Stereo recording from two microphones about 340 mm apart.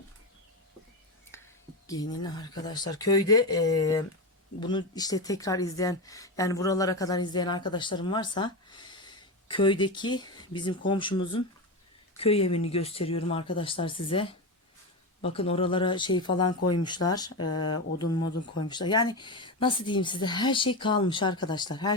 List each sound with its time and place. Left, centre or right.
1.3 s whispering: centre
1.9 s speech: centre
17.3 s speech: left
18.6 s speech: centre